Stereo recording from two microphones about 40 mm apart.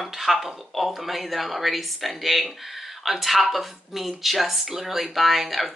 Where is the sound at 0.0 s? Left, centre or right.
Centre.